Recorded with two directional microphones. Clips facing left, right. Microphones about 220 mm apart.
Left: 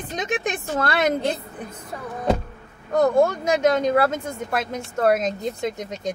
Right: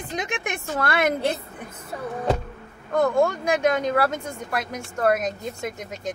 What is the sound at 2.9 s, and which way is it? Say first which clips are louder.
Speech: left 3 dB; 40° left (ahead or behind).